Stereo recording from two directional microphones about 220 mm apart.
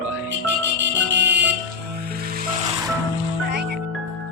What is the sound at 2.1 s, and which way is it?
Music, 45° right (ahead or behind).